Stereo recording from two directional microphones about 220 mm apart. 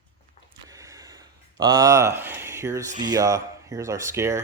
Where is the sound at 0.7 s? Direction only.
15° right (ahead or behind).